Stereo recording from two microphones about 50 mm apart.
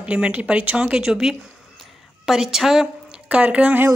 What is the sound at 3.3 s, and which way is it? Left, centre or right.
Speech, right.